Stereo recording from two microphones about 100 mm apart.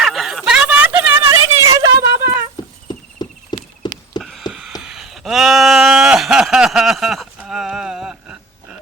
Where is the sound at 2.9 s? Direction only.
45° left (ahead or behind).